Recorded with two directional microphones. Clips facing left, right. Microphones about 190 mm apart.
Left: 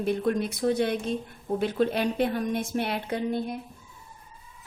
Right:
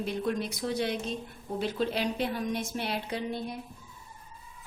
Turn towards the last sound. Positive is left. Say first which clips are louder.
# left 5 dB
turn(degrees=55)  # may be behind; listen again after turning